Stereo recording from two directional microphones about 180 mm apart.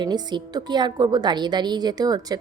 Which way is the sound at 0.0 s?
25° right (ahead or behind).